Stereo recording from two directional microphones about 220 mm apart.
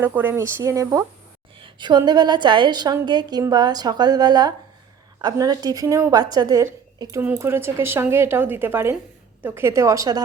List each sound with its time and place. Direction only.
0.0 s a woman's voice: 10° right (ahead or behind)